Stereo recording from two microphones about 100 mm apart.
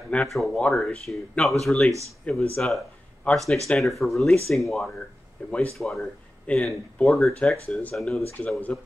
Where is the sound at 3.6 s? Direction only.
Centre (ahead or behind).